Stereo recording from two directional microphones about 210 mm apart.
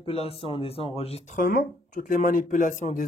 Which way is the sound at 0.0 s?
25° left (ahead or behind).